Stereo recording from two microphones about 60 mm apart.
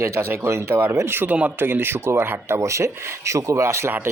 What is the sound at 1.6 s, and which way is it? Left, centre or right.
Speech, right.